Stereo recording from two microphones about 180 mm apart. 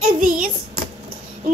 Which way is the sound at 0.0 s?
50° right (ahead or behind).